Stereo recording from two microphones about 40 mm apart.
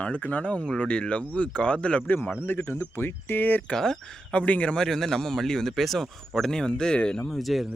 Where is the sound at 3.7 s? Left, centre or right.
Centre.